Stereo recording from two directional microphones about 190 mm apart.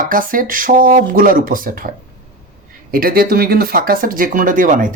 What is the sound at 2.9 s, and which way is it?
Speech, 50° right (ahead or behind).